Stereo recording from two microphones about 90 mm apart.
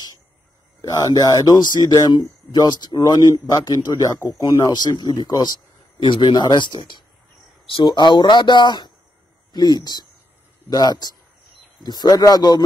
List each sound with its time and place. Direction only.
0.8 s speech: 40° left (ahead or behind)
4.6 s speech: 45° left (ahead or behind)